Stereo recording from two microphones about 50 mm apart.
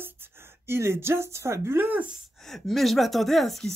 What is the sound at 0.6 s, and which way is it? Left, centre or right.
Speech, right.